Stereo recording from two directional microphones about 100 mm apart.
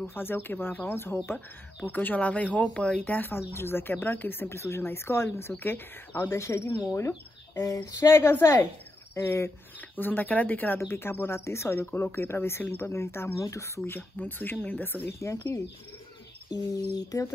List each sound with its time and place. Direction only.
0.0 s speech: 20° left (ahead or behind)
16.9 s speech: 35° left (ahead or behind)